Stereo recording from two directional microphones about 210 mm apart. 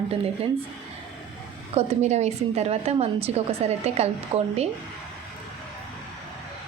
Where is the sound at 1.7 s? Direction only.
30° right (ahead or behind).